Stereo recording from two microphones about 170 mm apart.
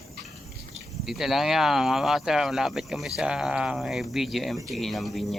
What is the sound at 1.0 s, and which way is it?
Speech, centre (ahead or behind).